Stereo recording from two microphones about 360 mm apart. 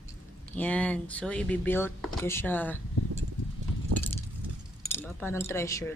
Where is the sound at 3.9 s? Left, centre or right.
Right.